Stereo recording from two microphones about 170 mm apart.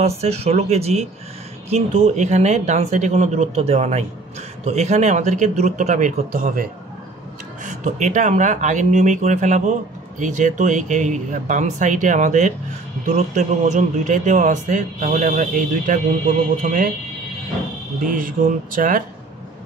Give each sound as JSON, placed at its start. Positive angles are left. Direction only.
{"t": 0.2, "sound": "speech", "side_deg": -35}
{"t": 18.0, "sound": "speech", "side_deg": -55}